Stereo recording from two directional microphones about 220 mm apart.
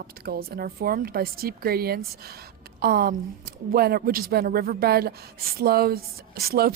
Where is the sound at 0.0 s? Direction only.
45° right (ahead or behind).